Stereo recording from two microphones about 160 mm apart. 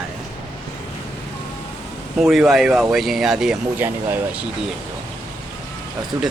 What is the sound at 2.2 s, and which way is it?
Speech, centre (ahead or behind).